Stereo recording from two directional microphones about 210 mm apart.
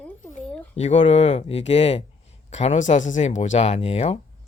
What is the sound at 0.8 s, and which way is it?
Speech, 30° left (ahead or behind).